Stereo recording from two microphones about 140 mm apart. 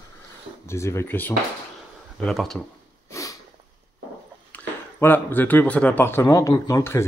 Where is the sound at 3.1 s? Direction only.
20° left (ahead or behind).